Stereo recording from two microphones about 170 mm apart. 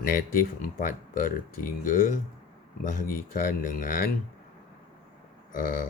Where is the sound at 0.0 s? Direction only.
55° left (ahead or behind).